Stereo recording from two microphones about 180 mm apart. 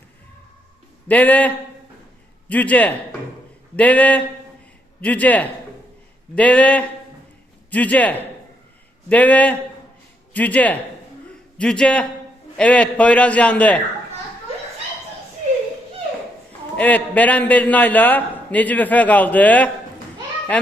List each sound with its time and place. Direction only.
1.0 s a man's voice: 10° left (ahead or behind)
16.7 s a man's voice: 10° left (ahead or behind)